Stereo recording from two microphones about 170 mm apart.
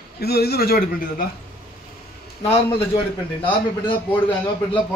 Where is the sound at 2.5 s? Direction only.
35° left (ahead or behind).